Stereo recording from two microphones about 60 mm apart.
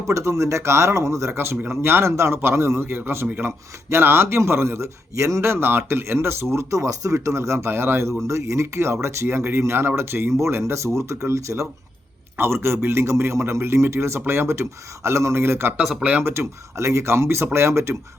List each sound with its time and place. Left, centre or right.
0.1 s speech: right
1.3 s speech: right
9.2 s speech: right
12.4 s speech: right
15.8 s speech: centre
16.2 s speech: right